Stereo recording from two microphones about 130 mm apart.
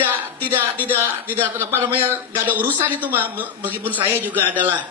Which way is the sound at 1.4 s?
15° right (ahead or behind).